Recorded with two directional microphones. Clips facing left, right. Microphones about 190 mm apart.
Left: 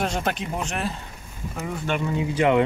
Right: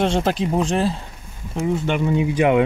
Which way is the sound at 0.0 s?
30° right (ahead or behind).